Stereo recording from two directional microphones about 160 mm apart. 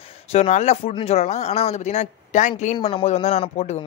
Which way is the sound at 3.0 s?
45° left (ahead or behind).